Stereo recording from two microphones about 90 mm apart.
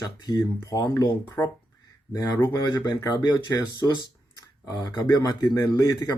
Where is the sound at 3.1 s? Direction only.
55° left (ahead or behind).